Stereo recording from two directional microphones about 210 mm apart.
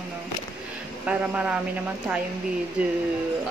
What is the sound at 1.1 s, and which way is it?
Speech, 5° right (ahead or behind).